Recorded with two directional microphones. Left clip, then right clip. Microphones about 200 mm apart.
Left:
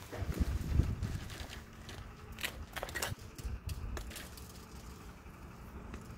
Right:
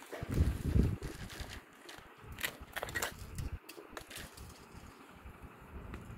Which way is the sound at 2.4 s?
5° right (ahead or behind).